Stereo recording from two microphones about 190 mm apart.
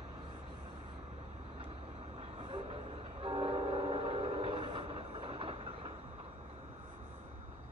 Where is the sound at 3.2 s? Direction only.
25° right (ahead or behind).